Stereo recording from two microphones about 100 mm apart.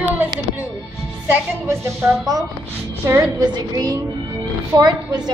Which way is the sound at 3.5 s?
40° right (ahead or behind).